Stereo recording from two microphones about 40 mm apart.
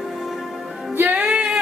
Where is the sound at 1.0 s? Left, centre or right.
Right.